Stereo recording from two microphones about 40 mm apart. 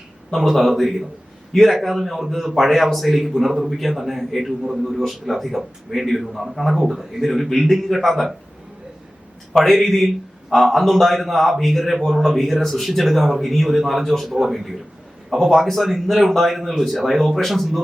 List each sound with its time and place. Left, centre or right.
0.3 s a man's voice: centre
9.6 s a man's voice: centre